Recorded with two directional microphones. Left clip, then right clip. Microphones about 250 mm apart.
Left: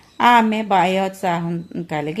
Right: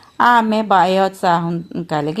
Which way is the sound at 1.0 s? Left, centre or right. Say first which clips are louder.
Right 6 dB; centre.